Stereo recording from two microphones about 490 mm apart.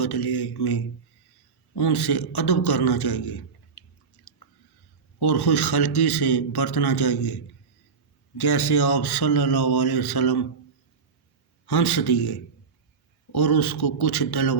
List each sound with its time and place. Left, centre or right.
0.0 s a man's voice: left
4.2 s chewing: left
5.2 s a man's voice: left
8.4 s a man's voice: left
11.6 s a man's voice: left